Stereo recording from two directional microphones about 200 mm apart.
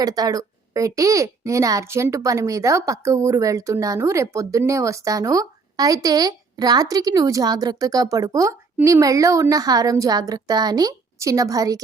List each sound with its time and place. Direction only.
0.0 s a child's voice: 20° right (ahead or behind)